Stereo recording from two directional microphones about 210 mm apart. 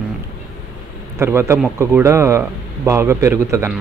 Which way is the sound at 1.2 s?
10° right (ahead or behind).